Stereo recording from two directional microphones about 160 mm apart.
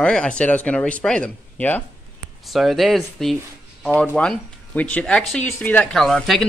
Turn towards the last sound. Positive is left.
turn(degrees=0)  # may be behind; listen again after turning